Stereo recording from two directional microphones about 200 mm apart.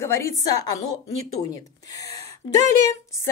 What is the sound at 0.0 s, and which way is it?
A woman's voice, 15° left (ahead or behind).